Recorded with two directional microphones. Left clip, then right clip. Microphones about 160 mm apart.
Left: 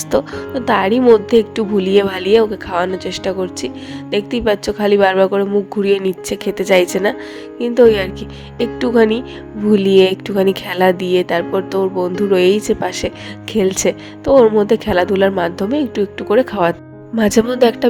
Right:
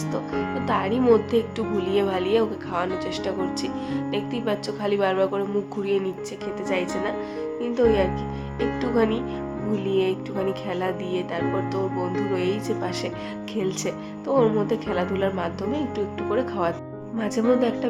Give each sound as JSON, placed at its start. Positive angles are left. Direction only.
{"t": 0.1, "sound": "a woman's voice", "side_deg": 50}
{"t": 9.7, "sound": "a woman's voice", "side_deg": 60}
{"t": 17.2, "sound": "speech", "side_deg": 60}